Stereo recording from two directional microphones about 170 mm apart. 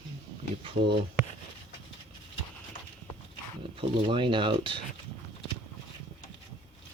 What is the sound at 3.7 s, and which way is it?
Speech, 30° right (ahead or behind).